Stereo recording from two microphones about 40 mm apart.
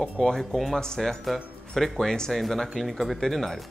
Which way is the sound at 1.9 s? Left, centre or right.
Centre.